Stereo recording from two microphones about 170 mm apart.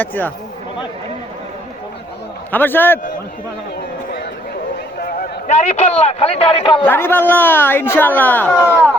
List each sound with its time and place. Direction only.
0.0 s speech: 10° left (ahead or behind)
2.5 s speech: 10° left (ahead or behind)
4.9 s a sound: 60° left (ahead or behind)
5.5 s a man's voice: 40° left (ahead or behind)
6.8 s speech: 15° left (ahead or behind)